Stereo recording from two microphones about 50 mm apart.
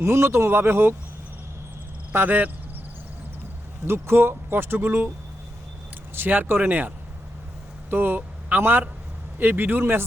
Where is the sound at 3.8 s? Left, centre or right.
Right.